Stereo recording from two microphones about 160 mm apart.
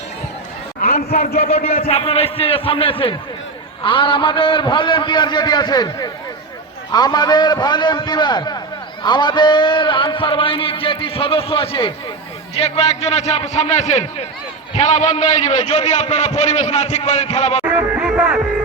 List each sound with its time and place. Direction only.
1.4 s a man's voice: 40° left (ahead or behind)
17.7 s music: 10° right (ahead or behind)